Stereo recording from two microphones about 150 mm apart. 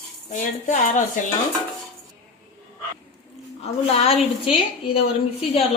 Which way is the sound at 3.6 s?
45° left (ahead or behind).